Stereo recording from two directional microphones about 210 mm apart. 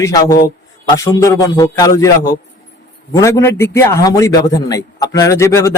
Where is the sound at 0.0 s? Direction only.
15° left (ahead or behind).